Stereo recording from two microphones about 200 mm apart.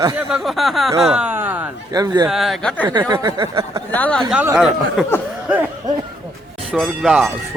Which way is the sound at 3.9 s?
5° left (ahead or behind).